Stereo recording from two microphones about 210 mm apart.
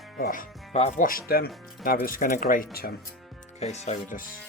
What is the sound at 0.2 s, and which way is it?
Speech, 40° left (ahead or behind).